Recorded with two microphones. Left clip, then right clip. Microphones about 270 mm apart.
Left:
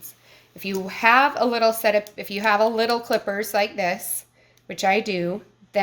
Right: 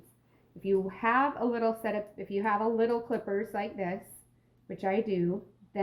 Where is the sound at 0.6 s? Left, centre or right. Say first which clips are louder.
Left 7 dB; left.